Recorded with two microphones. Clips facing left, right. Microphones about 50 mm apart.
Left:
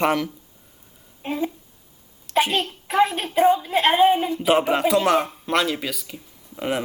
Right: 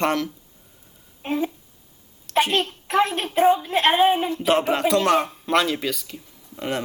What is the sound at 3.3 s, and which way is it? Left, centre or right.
Speech, centre.